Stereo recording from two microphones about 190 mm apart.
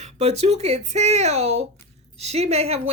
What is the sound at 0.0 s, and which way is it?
Speech, 35° right (ahead or behind).